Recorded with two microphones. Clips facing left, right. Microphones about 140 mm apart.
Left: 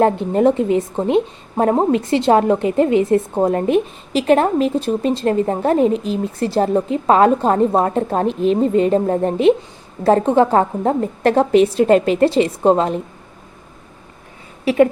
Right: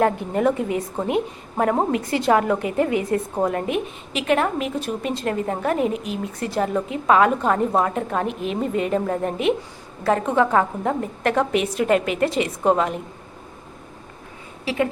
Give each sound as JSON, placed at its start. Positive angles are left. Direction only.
{"t": 0.0, "sound": "a woman's voice", "side_deg": 25}
{"t": 14.6, "sound": "speech", "side_deg": 55}